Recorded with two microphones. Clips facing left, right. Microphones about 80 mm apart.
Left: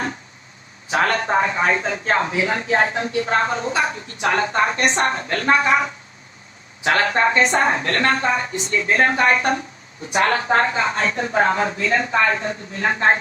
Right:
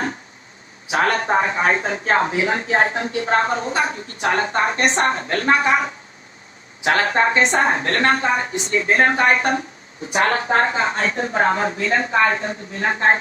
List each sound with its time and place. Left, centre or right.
1.1 s speech: right
6.8 s speech: right